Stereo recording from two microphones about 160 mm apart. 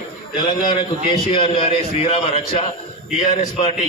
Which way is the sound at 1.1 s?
35° left (ahead or behind).